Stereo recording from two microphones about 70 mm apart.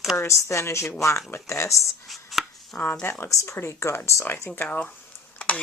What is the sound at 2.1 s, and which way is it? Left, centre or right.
Chopping, centre.